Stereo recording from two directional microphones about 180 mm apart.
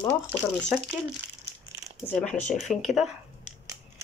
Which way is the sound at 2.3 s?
45° left (ahead or behind).